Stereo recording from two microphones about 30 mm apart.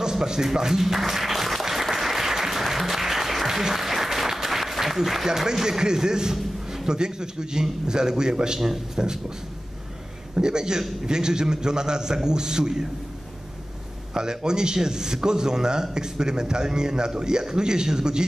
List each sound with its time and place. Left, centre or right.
0.1 s applause: centre
3.6 s speech: centre
6.3 s a sound: centre
7.0 s a man's voice: right
8.5 s speech: centre
8.9 s a man's voice: right
10.3 s a man's voice: right
14.1 s a man's voice: right